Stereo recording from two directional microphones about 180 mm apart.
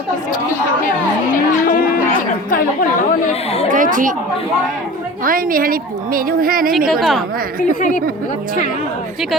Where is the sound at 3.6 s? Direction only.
50° right (ahead or behind).